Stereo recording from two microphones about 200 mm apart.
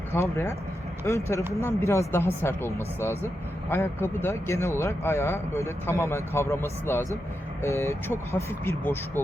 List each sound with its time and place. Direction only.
0.1 s speech: 15° left (ahead or behind)